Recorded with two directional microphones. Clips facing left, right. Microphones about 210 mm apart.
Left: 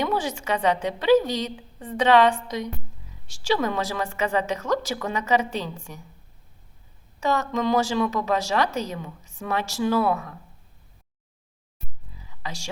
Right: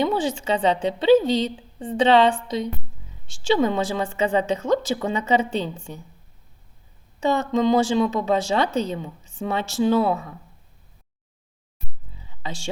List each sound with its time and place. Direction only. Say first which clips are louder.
0.0 s a woman's voice: right 3 dB; 25° right (ahead or behind)
7.3 s a woman's voice: right 4 dB; 25° right (ahead or behind)
12.4 s speech: right 4 dB; 30° right (ahead or behind)